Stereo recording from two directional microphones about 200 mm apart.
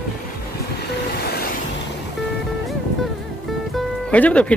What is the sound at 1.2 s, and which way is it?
Vehicle, 50° left (ahead or behind).